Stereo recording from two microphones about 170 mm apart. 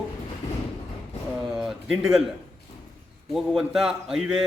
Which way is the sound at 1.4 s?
Centre (ahead or behind).